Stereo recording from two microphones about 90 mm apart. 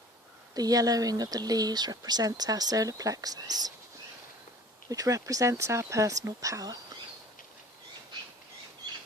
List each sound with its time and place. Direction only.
0.5 s speech: 45° right (ahead or behind)
4.9 s speech: 40° right (ahead or behind)